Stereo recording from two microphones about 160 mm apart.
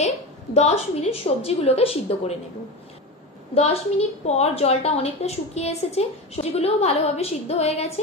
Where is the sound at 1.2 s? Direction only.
40° left (ahead or behind).